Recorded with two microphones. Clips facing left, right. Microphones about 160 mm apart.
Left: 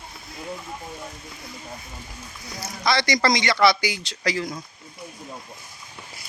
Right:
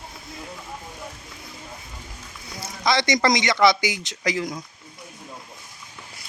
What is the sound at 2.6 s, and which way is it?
A man's voice, 20° right (ahead or behind).